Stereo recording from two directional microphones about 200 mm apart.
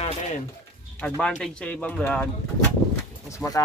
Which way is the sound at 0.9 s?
5° left (ahead or behind).